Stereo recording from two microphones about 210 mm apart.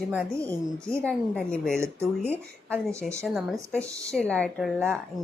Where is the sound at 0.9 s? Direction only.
5° left (ahead or behind).